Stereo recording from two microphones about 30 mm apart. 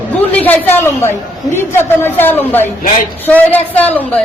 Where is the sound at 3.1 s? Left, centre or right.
Left.